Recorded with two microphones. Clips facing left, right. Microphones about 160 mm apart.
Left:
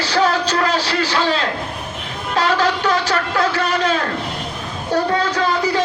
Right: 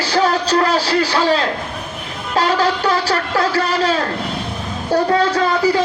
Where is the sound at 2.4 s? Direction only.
35° right (ahead or behind).